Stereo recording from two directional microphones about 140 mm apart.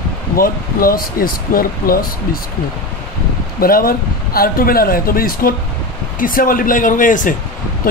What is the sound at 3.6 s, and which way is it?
Speech, 90° left.